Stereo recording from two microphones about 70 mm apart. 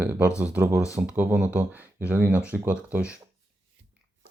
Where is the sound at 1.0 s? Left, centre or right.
Right.